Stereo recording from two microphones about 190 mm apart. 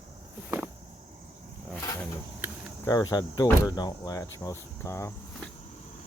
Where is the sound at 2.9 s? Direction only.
20° left (ahead or behind).